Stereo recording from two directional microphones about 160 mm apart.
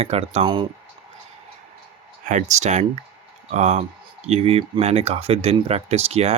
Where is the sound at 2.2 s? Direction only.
50° right (ahead or behind).